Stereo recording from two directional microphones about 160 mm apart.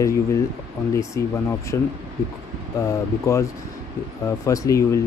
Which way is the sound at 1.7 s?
20° left (ahead or behind).